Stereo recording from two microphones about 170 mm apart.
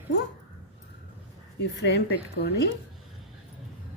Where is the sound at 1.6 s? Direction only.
80° left.